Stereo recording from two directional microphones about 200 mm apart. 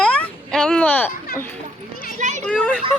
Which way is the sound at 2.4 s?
5° left (ahead or behind).